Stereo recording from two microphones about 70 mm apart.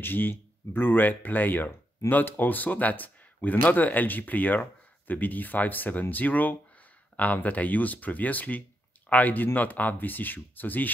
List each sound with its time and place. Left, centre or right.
0.0 s speech: left